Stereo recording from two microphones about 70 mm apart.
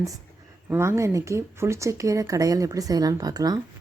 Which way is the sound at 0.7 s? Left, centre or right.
Right.